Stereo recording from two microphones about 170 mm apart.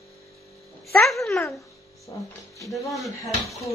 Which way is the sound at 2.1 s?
20° left (ahead or behind).